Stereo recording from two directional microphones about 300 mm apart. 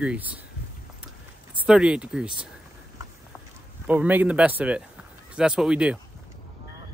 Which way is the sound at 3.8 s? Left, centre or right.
Centre.